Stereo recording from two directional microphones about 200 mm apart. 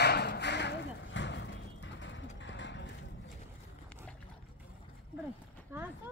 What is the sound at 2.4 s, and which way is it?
Clip-clop, 65° left (ahead or behind).